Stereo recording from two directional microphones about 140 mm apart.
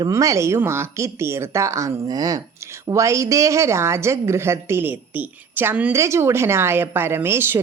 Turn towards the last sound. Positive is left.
turn(degrees=-15)  # may be behind; listen again after turning